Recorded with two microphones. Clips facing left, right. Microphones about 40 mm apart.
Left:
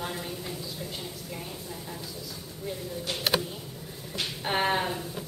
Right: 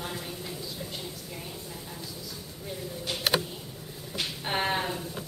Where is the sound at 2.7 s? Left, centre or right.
Centre.